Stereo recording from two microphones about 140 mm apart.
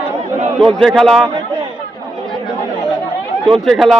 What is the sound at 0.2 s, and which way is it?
Chatter, 55° right (ahead or behind).